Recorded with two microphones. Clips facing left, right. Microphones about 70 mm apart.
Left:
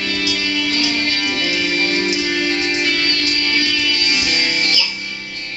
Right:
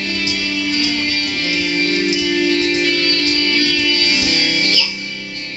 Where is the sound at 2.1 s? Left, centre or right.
Left.